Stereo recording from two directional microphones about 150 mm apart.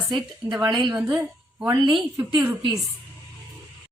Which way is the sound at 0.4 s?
15° right (ahead or behind).